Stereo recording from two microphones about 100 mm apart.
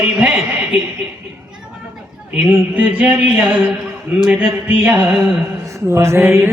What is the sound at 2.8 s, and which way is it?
Speech, 15° right (ahead or behind).